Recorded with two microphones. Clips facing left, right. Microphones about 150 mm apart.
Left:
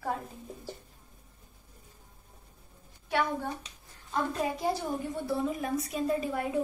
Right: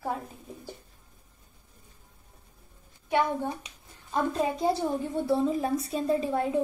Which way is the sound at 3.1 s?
20° right (ahead or behind).